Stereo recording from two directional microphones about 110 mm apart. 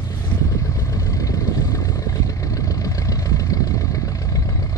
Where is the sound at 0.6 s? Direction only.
30° left (ahead or behind).